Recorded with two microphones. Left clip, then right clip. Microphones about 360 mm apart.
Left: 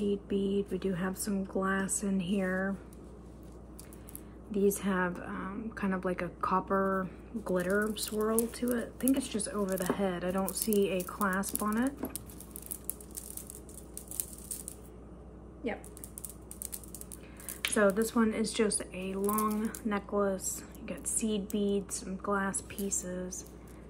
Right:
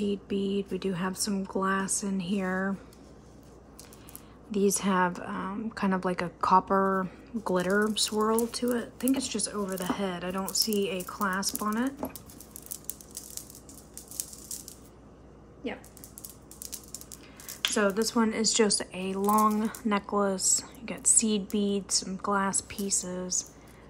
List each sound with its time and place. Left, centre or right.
0.0 s speech: centre
4.5 s a woman's voice: centre
17.7 s a woman's voice: centre